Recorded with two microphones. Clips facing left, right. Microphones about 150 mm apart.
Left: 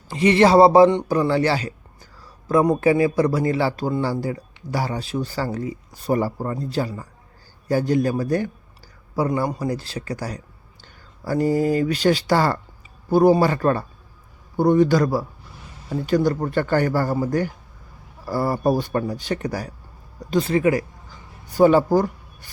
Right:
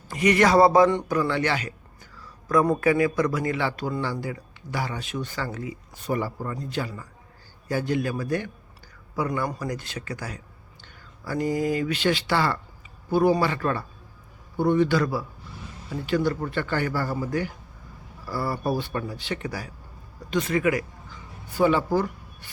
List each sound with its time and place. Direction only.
0.1 s a man's voice: 30° left (ahead or behind)
20.3 s a man's voice: 30° left (ahead or behind)